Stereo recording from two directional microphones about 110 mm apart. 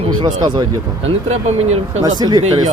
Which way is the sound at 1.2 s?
80° right.